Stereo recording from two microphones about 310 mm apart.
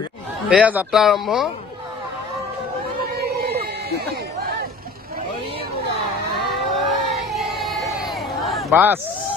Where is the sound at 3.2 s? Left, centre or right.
Right.